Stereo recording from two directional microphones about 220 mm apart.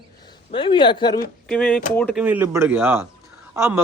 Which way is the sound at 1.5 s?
5° left (ahead or behind).